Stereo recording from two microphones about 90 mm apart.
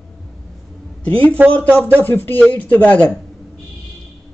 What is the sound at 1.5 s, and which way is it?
Speech, 20° left (ahead or behind).